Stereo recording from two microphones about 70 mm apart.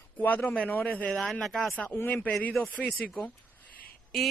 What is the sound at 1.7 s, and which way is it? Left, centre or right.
Speech, left.